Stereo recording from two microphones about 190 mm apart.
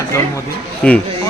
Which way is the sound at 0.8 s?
5° left (ahead or behind).